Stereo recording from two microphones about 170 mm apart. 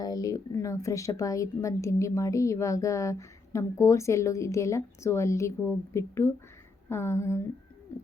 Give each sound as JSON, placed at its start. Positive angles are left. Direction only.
{"t": 0.0, "sound": "speech", "side_deg": 20}
{"t": 7.9, "sound": "bird", "side_deg": 15}